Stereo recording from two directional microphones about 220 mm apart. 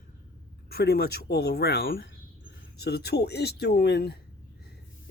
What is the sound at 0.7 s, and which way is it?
Speech, 45° left (ahead or behind).